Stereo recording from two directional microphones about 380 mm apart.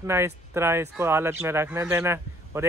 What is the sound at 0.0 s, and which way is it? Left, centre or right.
Speech, centre.